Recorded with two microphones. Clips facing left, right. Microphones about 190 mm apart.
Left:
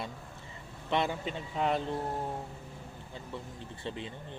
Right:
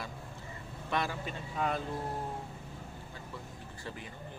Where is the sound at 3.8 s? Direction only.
25° left (ahead or behind).